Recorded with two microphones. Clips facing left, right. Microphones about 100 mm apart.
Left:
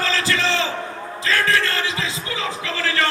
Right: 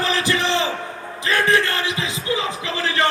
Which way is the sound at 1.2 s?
20° right (ahead or behind).